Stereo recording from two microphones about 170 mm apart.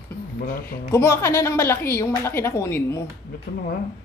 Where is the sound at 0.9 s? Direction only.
15° left (ahead or behind).